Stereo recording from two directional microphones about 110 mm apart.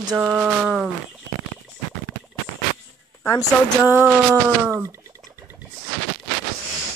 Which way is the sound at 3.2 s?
25° left (ahead or behind).